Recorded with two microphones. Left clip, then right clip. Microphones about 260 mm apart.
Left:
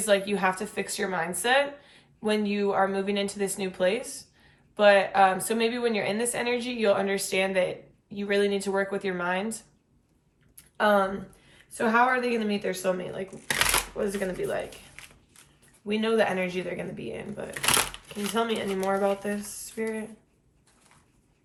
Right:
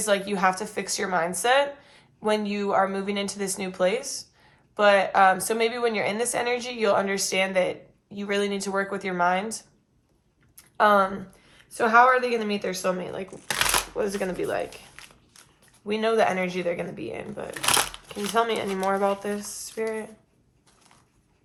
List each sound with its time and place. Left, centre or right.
0.0 s a woman's voice: right
10.6 s a sound: right
11.5 s a woman's voice: right
13.6 s shuffling cards: centre
13.9 s a woman's voice: right
15.9 s a woman's voice: right
17.5 s a sound: centre
18.3 s a woman's voice: right